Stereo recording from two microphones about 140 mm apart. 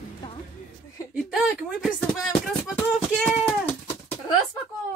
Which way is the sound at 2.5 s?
5° left (ahead or behind).